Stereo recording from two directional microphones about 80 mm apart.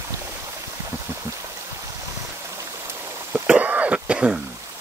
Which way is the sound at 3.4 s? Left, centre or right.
Centre.